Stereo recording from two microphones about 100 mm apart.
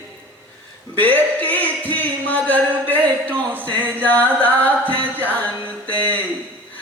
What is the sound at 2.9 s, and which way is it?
Speech, 20° right (ahead or behind).